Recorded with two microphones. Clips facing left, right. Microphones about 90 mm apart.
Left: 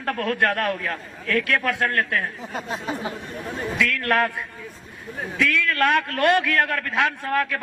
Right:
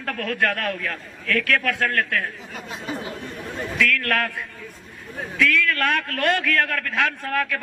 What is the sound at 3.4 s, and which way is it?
A man's voice, 15° left (ahead or behind).